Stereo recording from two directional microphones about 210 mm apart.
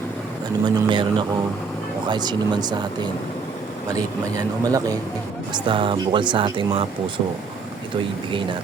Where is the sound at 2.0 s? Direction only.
20° right (ahead or behind).